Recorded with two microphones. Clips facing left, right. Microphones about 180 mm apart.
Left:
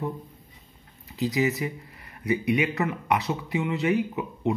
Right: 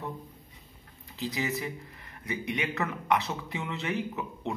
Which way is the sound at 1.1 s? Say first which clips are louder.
Left 7 dB; 15° left (ahead or behind).